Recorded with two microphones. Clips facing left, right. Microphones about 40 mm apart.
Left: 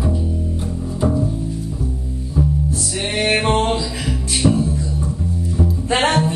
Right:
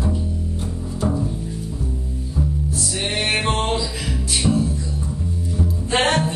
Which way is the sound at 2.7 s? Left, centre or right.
Centre.